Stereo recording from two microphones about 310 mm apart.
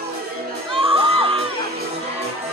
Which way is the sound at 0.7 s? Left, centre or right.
Centre.